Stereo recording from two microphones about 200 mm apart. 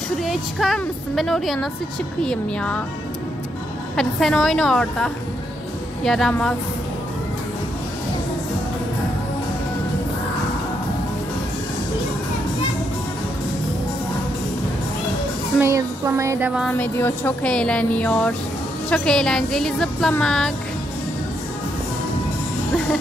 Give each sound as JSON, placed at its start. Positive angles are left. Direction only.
{"t": 0.2, "sound": "speech", "side_deg": 0}
{"t": 3.9, "sound": "speech", "side_deg": 5}
{"t": 15.6, "sound": "music", "side_deg": -15}
{"t": 16.6, "sound": "music", "side_deg": 10}
{"t": 18.9, "sound": "speech", "side_deg": 5}